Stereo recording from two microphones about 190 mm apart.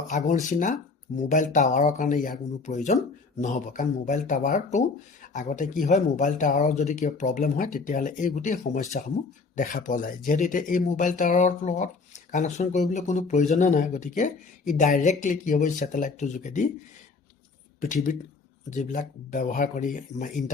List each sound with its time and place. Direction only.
0.1 s speech: 40° left (ahead or behind)
17.7 s speech: 40° left (ahead or behind)